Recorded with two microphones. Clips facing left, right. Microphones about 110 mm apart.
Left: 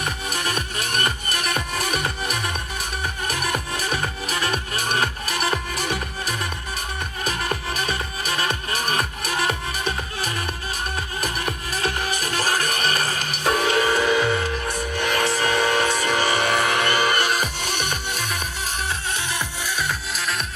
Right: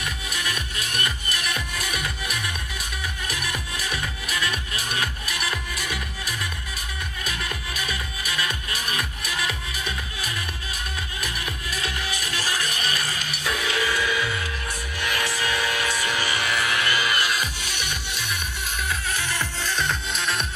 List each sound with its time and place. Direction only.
0.0 s music: 50° left (ahead or behind)
15.3 s a sound: 50° left (ahead or behind)
16.0 s music: 40° left (ahead or behind)
19.3 s music: 10° left (ahead or behind)